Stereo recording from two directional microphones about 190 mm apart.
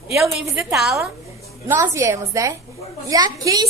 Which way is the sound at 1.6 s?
15° right (ahead or behind).